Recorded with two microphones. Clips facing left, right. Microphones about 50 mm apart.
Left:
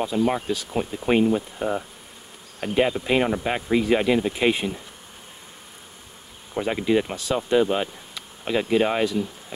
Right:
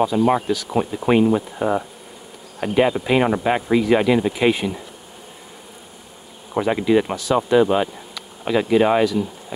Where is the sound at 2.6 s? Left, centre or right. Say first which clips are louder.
Right 4 dB; centre.